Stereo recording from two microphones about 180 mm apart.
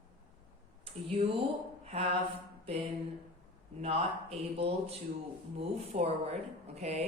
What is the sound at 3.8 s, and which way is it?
A man's voice, 35° right (ahead or behind).